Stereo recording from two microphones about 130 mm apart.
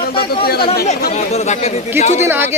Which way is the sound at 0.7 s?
55° left (ahead or behind).